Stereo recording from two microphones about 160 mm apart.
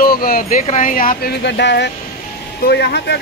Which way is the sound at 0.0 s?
65° left (ahead or behind).